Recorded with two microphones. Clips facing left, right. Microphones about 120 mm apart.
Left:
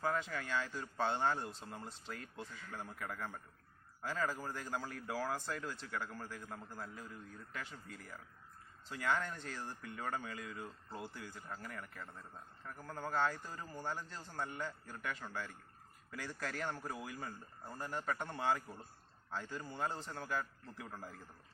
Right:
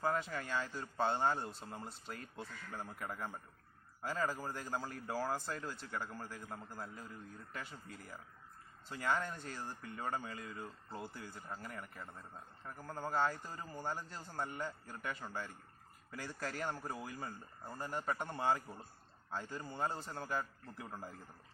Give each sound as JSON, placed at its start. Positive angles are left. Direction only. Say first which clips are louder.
{"t": 0.0, "sound": "a man's voice", "louder": "right 1 dB", "side_deg": -10}
{"t": 1.5, "sound": "a man's voice", "louder": "right 1 dB", "side_deg": 0}
{"t": 8.9, "sound": "a man's voice", "louder": "even", "side_deg": -10}
{"t": 10.4, "sound": "speech", "louder": "even", "side_deg": 5}
{"t": 11.1, "sound": "a man's voice", "louder": "right 1 dB", "side_deg": -10}
{"t": 20.9, "sound": "a man's voice", "louder": "right 3 dB", "side_deg": -20}